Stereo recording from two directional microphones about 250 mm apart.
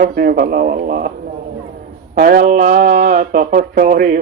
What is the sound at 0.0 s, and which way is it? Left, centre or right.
Speech, right.